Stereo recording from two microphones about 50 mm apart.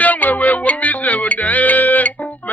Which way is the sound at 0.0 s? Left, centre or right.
Left.